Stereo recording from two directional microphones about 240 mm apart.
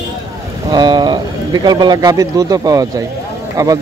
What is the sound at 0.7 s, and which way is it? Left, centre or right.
Speech, centre.